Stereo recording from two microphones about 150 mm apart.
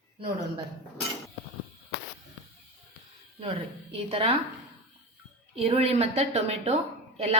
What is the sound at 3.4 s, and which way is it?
Speech, 40° right (ahead or behind).